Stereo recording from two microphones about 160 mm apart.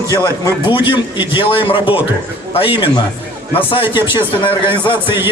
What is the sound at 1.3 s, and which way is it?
A man's voice, 35° left (ahead or behind).